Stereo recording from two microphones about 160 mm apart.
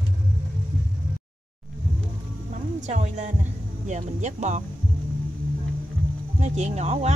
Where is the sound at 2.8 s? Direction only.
45° right (ahead or behind).